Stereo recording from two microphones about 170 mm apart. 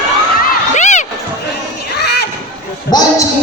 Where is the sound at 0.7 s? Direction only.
45° left (ahead or behind).